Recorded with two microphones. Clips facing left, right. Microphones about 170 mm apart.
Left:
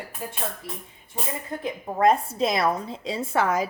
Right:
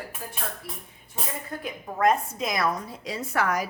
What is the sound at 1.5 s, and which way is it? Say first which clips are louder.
A woman's voice: left 4 dB; 25° left (ahead or behind).